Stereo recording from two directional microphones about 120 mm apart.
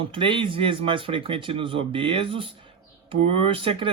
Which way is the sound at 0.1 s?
45° right (ahead or behind).